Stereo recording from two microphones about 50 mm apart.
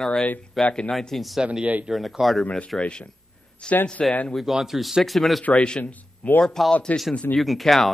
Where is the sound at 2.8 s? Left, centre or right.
Centre.